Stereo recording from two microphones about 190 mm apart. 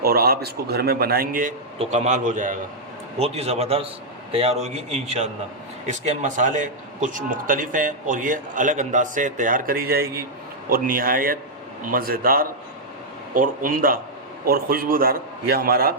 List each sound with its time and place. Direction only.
0.0 s a man's voice: 55° right (ahead or behind)